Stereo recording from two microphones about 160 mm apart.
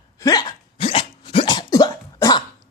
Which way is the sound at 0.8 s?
35° left (ahead or behind).